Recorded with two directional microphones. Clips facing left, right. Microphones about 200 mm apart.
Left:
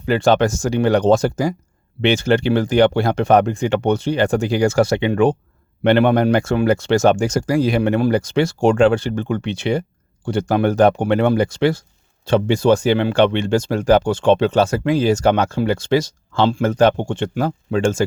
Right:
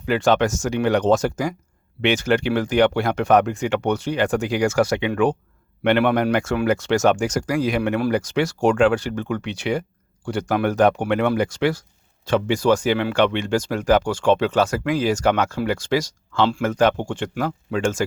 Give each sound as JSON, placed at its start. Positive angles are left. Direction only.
{"t": 0.0, "sound": "speech", "side_deg": 30}